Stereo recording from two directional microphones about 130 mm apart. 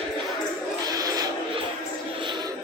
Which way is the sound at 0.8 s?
30° right (ahead or behind).